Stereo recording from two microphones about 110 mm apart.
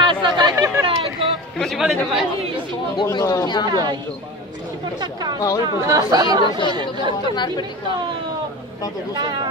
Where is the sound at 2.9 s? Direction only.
40° left (ahead or behind).